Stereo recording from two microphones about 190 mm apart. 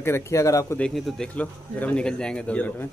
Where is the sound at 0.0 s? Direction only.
15° left (ahead or behind).